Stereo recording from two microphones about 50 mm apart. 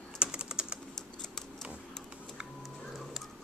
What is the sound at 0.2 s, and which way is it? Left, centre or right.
Typing, centre.